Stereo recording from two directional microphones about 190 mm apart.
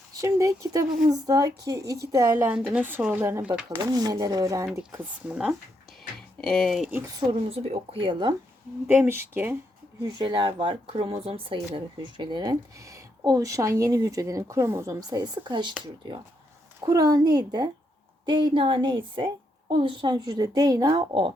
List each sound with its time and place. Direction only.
0.1 s speech: 15° right (ahead or behind)
2.4 s speech: 5° right (ahead or behind)
3.9 s speech: 20° right (ahead or behind)
5.3 s speech: centre (ahead or behind)
7.4 s speech: 30° right (ahead or behind)
8.9 s speech: 10° right (ahead or behind)
10.0 s speech: 25° right (ahead or behind)
16.8 s speech: 20° right (ahead or behind)